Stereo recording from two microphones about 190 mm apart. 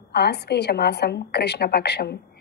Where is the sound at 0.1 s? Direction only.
60° left (ahead or behind).